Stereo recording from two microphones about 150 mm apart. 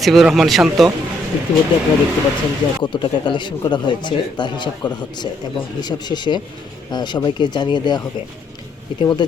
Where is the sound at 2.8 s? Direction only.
30° left (ahead or behind).